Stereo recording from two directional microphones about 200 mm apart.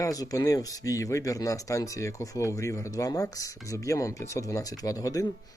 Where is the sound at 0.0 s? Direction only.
15° left (ahead or behind).